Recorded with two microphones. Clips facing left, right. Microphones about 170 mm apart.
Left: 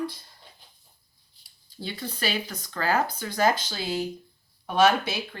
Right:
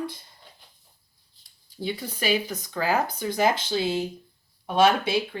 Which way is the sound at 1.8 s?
15° right (ahead or behind).